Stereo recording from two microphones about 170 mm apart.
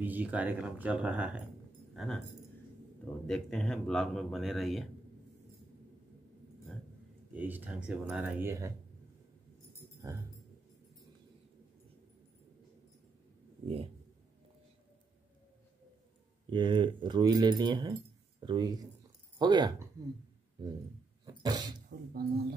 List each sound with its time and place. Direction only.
0.0 s speech: 10° right (ahead or behind)
2.0 s speech: 5° left (ahead or behind)
3.3 s speech: 5° left (ahead or behind)
7.3 s speech: 10° right (ahead or behind)
10.0 s speech: 15° right (ahead or behind)
16.4 s speech: 30° right (ahead or behind)
21.3 s dog: 25° right (ahead or behind)
22.1 s speech: 65° right (ahead or behind)